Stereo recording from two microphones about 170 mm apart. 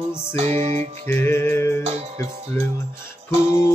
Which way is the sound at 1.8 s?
40° right (ahead or behind).